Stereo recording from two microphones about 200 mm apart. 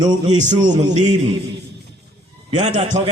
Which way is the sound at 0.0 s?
20° right (ahead or behind).